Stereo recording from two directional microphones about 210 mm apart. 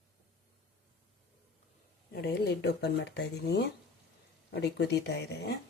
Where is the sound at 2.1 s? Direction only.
50° left (ahead or behind).